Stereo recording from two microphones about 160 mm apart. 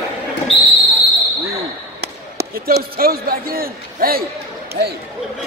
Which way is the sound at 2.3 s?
80° right.